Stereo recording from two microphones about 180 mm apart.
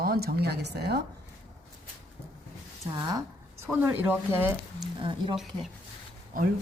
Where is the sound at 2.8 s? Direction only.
25° right (ahead or behind).